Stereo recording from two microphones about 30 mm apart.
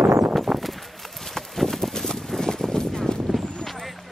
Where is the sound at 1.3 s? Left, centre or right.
Centre.